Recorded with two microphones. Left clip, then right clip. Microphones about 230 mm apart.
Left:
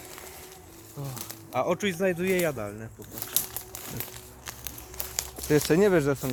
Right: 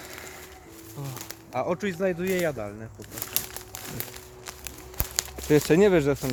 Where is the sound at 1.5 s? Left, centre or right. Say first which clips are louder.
Left 1 dB; left.